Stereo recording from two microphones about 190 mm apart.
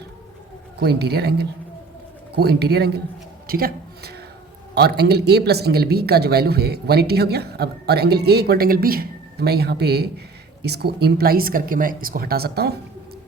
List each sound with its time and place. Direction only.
0.8 s speech: 60° right (ahead or behind)
3.4 s a sound: 50° right (ahead or behind)
4.7 s speech: 60° right (ahead or behind)